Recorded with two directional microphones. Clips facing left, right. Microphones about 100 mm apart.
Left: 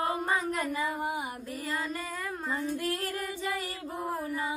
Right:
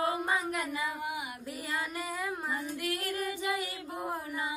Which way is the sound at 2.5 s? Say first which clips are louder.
Left 3 dB; 35° left (ahead or behind).